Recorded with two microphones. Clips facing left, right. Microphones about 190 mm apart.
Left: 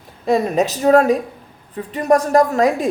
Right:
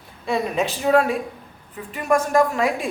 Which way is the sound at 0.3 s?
40° left (ahead or behind).